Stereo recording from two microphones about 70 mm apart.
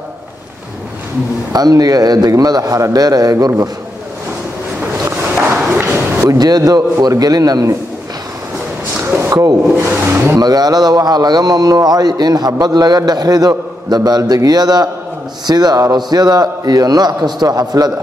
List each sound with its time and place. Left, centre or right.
1.5 s a man's voice: right
5.0 s a sound: right
6.3 s a man's voice: right
9.0 s a sound: right
9.3 s speech: right
9.8 s speech: right
10.4 s a man's voice: right